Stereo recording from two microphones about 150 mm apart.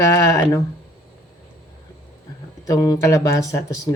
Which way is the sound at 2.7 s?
25° left (ahead or behind).